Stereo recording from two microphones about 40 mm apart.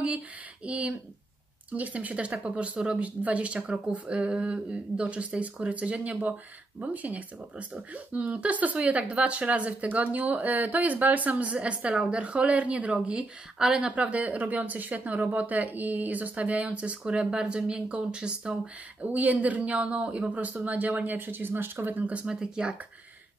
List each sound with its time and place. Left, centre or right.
0.7 s a woman's voice: right
11.5 s speech: right
13.6 s speech: centre
13.8 s speech: right
18.9 s speech: right
22.3 s speech: centre